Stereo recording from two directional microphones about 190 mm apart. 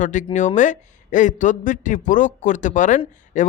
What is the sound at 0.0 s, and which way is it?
A man's voice, 40° left (ahead or behind).